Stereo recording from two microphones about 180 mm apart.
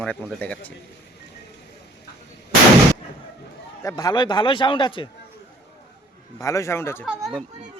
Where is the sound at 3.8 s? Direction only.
20° left (ahead or behind).